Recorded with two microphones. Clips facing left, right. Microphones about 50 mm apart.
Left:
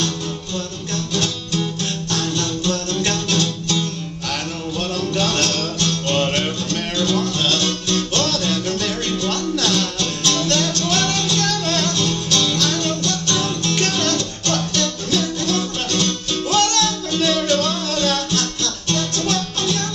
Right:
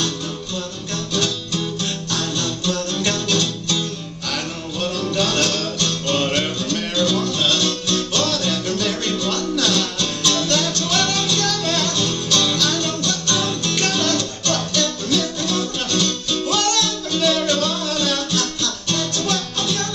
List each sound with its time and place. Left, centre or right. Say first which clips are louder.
2.1 s music: left 2 dB; left
5.1 s music: even; left